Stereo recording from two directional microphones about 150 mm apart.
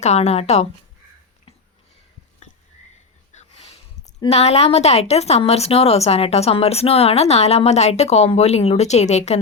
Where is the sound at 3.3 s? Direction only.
40° left (ahead or behind).